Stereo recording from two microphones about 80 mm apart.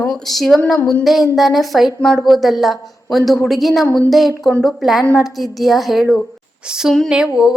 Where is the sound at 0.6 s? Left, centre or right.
Centre.